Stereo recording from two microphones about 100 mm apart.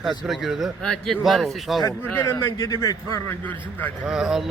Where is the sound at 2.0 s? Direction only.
20° left (ahead or behind).